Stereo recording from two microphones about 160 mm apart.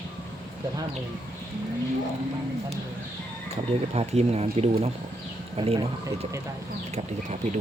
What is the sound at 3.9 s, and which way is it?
Speech, 40° right (ahead or behind).